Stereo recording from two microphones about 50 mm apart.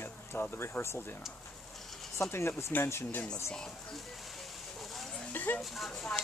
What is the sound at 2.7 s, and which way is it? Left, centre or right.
Speech, left.